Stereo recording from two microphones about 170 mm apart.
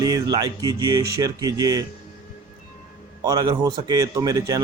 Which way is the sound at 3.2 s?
25° right (ahead or behind).